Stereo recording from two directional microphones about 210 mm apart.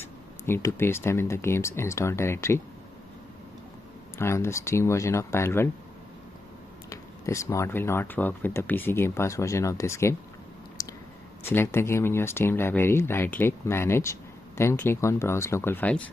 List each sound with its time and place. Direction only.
0.0 s speech: 10° left (ahead or behind)
4.2 s speech: 10° left (ahead or behind)
6.9 s speech: 15° left (ahead or behind)
10.8 s a sound: 15° left (ahead or behind)
11.4 s speech: 10° left (ahead or behind)